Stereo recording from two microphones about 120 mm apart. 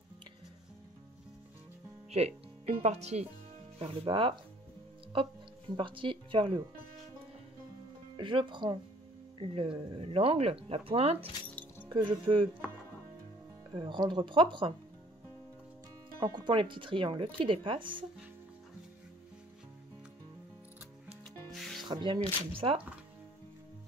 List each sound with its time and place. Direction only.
2.0 s speech: 60° right (ahead or behind)
3.8 s speech: 50° right (ahead or behind)
5.8 s speech: 45° right (ahead or behind)
8.2 s speech: 45° right (ahead or behind)
13.7 s speech: 40° right (ahead or behind)
16.2 s speech: 40° right (ahead or behind)
21.5 s music: centre (ahead or behind)
21.8 s speech: 40° right (ahead or behind)